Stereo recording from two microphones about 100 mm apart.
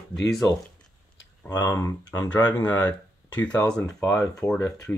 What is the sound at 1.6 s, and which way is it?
Speech, 20° left (ahead or behind).